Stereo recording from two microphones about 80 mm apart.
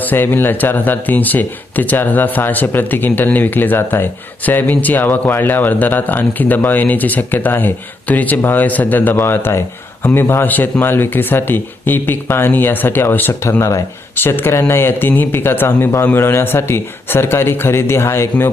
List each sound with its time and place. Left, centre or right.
0.0 s speech: left
14.2 s speech: left